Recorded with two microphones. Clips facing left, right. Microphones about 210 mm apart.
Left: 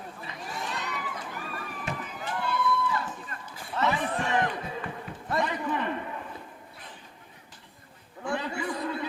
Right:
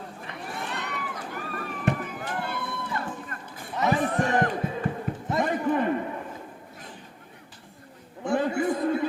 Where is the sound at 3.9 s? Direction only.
45° right (ahead or behind).